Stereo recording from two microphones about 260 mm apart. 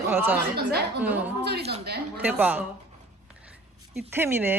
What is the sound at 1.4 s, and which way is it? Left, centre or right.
Speech, right.